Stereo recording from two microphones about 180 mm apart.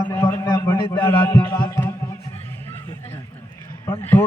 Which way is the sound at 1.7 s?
15° left (ahead or behind).